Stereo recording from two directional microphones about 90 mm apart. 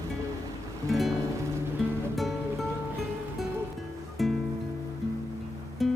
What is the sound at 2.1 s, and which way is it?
Music, centre (ahead or behind).